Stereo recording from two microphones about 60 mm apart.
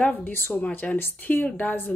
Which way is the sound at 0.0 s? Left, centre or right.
Left.